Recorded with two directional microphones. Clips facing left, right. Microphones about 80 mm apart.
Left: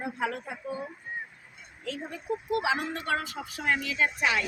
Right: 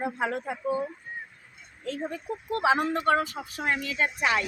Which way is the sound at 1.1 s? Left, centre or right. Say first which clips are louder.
Left 2 dB; centre.